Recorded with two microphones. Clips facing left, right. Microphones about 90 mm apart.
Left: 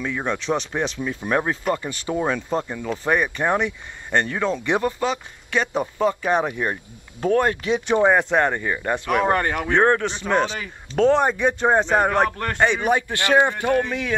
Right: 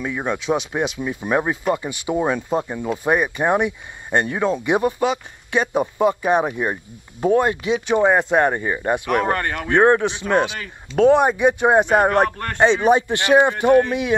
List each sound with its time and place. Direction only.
0.0 s speech: 10° right (ahead or behind)
9.3 s speech: 10° left (ahead or behind)
9.7 s speech: 15° right (ahead or behind)
12.5 s speech: 20° right (ahead or behind)